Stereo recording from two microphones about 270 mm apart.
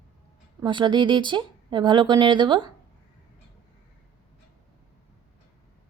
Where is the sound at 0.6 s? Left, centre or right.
Centre.